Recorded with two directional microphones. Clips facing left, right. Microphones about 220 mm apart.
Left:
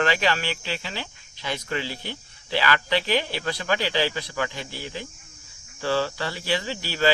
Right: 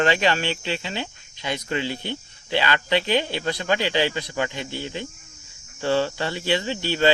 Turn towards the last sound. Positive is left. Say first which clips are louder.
# right 3 dB
turn(degrees=-25)  # may be behind; listen again after turning